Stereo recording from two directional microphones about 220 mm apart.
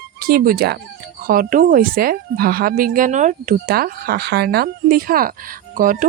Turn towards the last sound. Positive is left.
turn(degrees=-40)  # may be behind; listen again after turning